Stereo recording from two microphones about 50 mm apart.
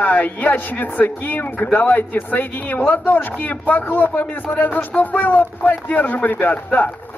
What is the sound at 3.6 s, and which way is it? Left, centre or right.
Speech, left.